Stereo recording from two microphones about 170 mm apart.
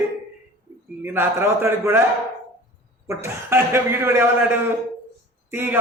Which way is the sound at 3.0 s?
15° right (ahead or behind).